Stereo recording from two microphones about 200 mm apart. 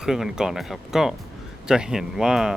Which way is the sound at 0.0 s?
5° right (ahead or behind).